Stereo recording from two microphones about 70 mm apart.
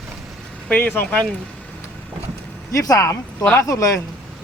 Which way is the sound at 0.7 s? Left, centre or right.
Left.